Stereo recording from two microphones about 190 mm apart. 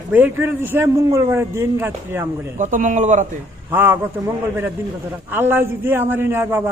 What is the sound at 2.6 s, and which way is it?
Speech, 45° right (ahead or behind).